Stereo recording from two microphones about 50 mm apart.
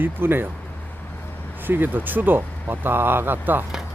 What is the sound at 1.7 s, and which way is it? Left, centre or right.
Speech, right.